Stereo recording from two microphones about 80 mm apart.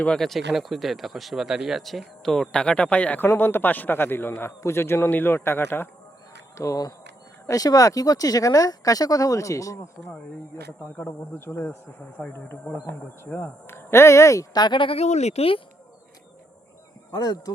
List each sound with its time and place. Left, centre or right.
0.0 s a man's voice: centre; by 6.7 s left
7.4 s speech: left
10.7 s a man's voice: left
12.1 s speech: centre
13.2 s speech: left
14.5 s speech: left
17.1 s speech: left